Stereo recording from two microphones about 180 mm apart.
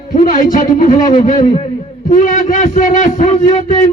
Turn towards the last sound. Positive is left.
turn(degrees=40)  # may be behind; listen again after turning